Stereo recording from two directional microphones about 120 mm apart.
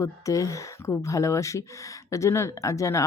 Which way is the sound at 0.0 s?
25° left (ahead or behind).